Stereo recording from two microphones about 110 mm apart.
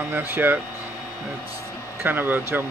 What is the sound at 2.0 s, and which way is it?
Speech, 20° right (ahead or behind).